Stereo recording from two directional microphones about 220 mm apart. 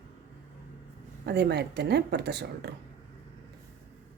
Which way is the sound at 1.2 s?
50° right (ahead or behind).